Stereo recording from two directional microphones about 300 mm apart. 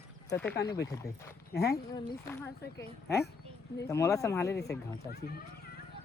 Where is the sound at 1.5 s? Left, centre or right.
Left.